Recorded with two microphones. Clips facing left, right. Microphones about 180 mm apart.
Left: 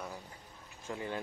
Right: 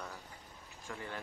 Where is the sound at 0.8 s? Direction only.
20° left (ahead or behind).